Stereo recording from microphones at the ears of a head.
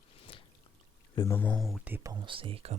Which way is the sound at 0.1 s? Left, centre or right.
Left.